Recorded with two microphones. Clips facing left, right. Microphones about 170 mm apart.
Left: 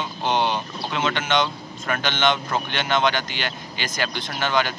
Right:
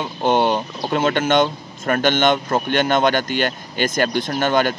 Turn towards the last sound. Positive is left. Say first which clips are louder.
# right 5 dB
turn(degrees=-50)  # may be behind; listen again after turning